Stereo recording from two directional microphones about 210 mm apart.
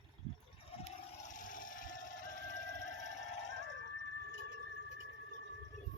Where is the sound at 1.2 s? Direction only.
40° left (ahead or behind).